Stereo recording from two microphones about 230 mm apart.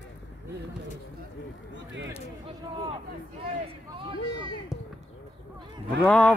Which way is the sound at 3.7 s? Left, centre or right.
Right.